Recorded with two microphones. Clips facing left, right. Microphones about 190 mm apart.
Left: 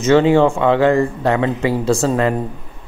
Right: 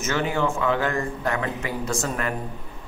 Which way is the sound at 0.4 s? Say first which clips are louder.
Left 9 dB; 90° left.